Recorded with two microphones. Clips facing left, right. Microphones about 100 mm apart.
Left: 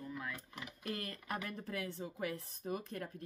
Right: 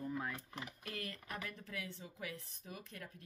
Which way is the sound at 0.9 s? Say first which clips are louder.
Left 6 dB; 40° left (ahead or behind).